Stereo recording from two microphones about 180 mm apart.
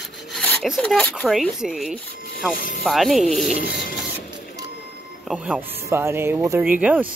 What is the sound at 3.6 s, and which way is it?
Printer, 50° left (ahead or behind).